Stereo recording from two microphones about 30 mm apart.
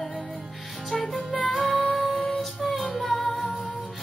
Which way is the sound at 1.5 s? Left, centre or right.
Centre.